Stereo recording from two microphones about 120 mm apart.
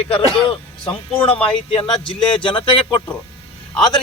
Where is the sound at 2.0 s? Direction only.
45° left (ahead or behind).